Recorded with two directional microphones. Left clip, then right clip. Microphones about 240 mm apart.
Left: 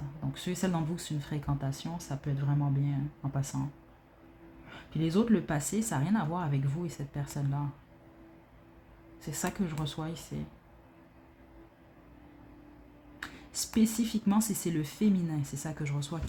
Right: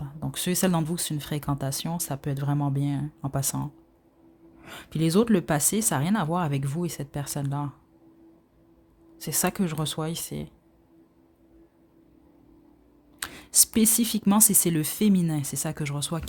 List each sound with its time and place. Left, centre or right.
0.2 s speech: right
4.6 s speech: right
9.1 s speech: right
13.1 s a sound: right
13.7 s speech: right